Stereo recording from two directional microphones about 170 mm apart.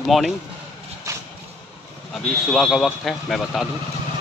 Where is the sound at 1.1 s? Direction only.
20° right (ahead or behind).